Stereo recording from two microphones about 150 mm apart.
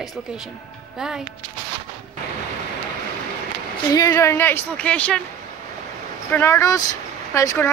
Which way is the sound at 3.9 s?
25° left (ahead or behind).